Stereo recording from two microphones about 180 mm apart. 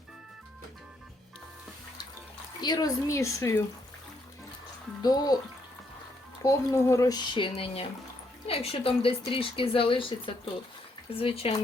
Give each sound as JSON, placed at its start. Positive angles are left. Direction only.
{"t": 2.6, "sound": "speech", "side_deg": 20}
{"t": 5.0, "sound": "speech", "side_deg": 20}
{"t": 6.4, "sound": "speech", "side_deg": 15}